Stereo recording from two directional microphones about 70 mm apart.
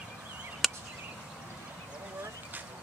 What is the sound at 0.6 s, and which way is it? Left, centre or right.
Chop, centre.